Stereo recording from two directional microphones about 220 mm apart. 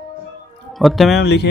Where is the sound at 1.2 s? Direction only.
50° left (ahead or behind).